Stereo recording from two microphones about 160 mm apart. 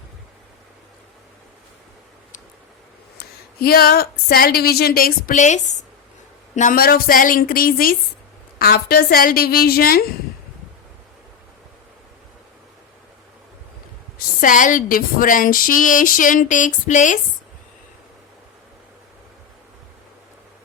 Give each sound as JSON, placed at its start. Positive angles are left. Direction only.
{"t": 3.2, "sound": "speech", "side_deg": 70}
{"t": 6.6, "sound": "speech", "side_deg": 60}
{"t": 14.4, "sound": "speech", "side_deg": 55}